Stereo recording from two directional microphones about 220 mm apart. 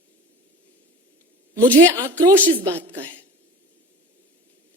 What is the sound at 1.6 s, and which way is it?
A woman's voice, 15° right (ahead or behind).